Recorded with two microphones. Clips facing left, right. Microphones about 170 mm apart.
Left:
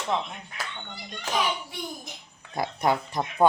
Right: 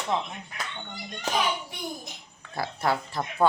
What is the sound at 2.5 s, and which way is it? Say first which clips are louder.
Speech: left 2 dB; 20° left (ahead or behind).